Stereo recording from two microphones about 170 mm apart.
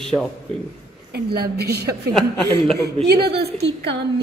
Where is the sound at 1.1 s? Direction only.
70° right (ahead or behind).